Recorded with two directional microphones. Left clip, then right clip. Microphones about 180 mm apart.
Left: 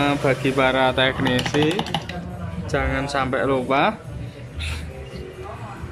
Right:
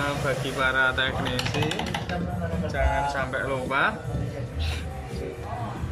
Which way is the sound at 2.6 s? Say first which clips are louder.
Left 2 dB; 55° left (ahead or behind).